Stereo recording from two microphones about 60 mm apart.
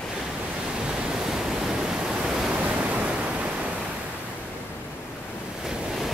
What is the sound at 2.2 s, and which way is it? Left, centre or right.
Pink noise, centre.